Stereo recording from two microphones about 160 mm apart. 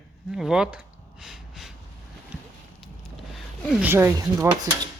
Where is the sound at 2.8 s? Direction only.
Centre (ahead or behind).